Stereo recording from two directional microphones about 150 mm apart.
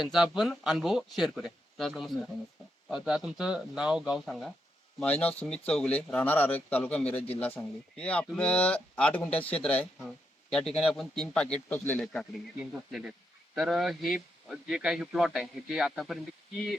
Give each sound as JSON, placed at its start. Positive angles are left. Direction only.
{"t": 0.0, "sound": "a man's voice", "side_deg": 0}
{"t": 13.6, "sound": "a man's voice", "side_deg": -5}